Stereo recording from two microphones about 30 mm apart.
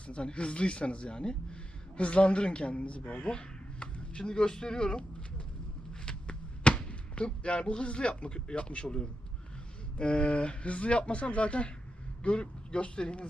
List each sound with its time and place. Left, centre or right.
0.1 s speech: left
5.9 s a sound: left
10.0 s speech: left